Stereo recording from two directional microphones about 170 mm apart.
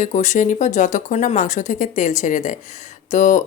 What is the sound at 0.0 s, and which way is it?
Speech, 45° left (ahead or behind).